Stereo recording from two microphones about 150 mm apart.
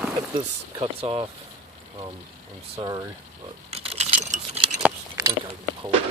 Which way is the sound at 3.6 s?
45° right (ahead or behind).